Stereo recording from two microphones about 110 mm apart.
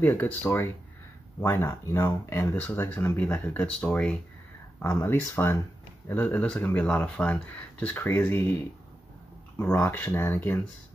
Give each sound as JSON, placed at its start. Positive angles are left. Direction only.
{"t": 0.0, "sound": "speech", "side_deg": 15}
{"t": 9.8, "sound": "speech", "side_deg": 15}